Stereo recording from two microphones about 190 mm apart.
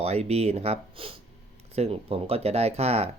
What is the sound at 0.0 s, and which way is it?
Speech, 35° right (ahead or behind).